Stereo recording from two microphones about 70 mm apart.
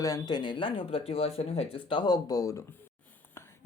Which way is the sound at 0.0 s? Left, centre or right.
Left.